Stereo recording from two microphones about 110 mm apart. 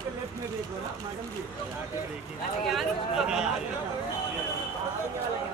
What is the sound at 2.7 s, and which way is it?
Speech, 5° right (ahead or behind).